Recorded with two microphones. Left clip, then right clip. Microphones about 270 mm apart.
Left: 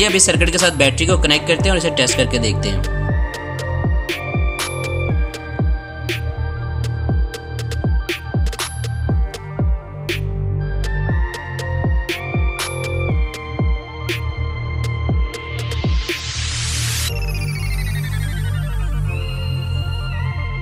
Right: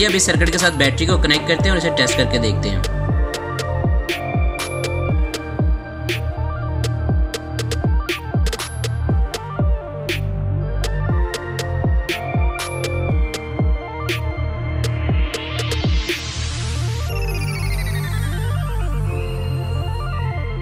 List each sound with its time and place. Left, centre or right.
0.0 s speech: centre
4.1 s music: centre
7.8 s music: centre
12.1 s music: centre
15.3 s music: centre